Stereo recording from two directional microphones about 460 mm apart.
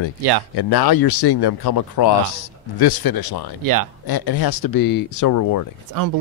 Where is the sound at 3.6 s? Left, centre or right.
Right.